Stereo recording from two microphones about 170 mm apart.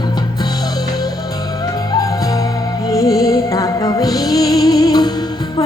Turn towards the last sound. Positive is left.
turn(degrees=25)  # may be behind; listen again after turning